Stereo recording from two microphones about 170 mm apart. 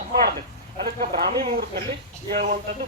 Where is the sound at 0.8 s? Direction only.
60° right (ahead or behind).